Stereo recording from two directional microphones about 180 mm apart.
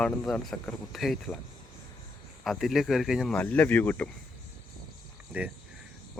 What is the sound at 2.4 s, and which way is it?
Speech, centre (ahead or behind).